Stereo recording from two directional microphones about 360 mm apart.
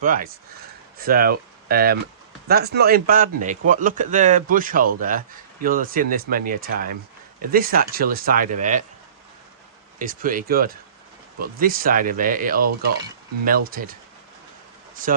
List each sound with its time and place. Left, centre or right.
0.0 s speech: right
10.0 s speech: right